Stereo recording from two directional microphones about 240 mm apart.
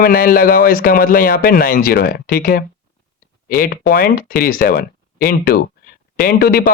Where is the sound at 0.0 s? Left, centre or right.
Left.